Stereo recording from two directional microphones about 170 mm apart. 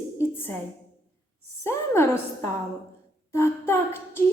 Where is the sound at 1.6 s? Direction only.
15° left (ahead or behind).